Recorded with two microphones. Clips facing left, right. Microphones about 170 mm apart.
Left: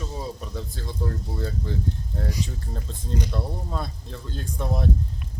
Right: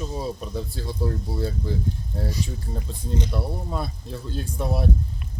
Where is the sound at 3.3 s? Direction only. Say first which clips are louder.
Right 2 dB; 10° right (ahead or behind).